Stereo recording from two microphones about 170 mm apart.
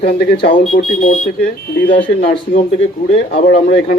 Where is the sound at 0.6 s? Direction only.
55° left (ahead or behind).